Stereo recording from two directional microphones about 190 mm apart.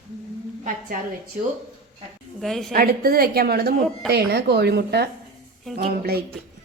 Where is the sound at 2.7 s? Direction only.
50° right (ahead or behind).